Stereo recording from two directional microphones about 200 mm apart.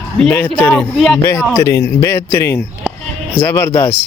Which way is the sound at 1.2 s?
15° left (ahead or behind).